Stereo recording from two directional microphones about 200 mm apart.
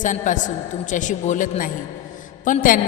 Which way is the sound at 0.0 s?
40° left (ahead or behind).